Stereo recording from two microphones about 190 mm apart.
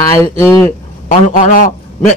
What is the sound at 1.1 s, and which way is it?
Speech, 40° left (ahead or behind).